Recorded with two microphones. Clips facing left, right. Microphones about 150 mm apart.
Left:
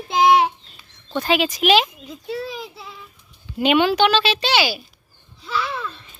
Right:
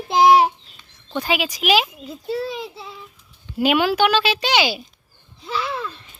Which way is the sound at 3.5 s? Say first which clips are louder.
Left 1 dB; 5° right (ahead or behind).